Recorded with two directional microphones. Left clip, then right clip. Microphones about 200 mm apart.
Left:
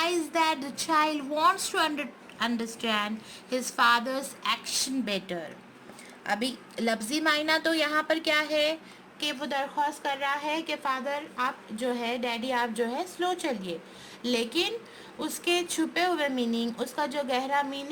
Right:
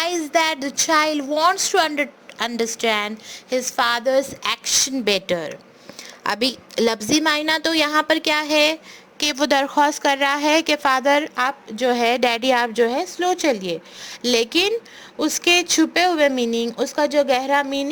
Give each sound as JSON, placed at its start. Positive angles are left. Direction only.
{"t": 0.0, "sound": "a woman's voice", "side_deg": -40}